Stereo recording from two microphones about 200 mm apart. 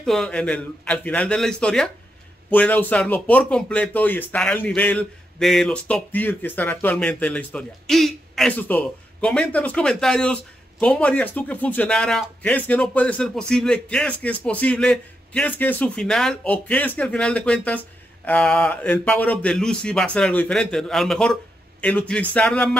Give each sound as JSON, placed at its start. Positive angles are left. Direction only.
{"t": 0.0, "sound": "a man's voice", "side_deg": 0}